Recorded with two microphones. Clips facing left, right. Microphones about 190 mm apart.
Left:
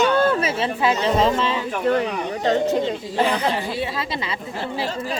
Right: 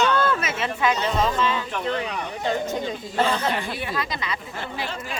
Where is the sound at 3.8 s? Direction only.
25° left (ahead or behind).